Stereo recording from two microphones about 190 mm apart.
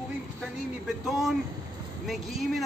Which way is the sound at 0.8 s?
Centre (ahead or behind).